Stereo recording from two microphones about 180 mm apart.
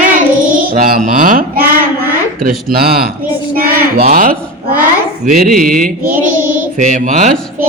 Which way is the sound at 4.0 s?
50° right (ahead or behind).